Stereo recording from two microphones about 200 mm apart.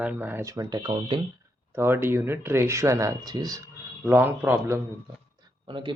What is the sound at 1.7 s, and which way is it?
Speech, 10° right (ahead or behind).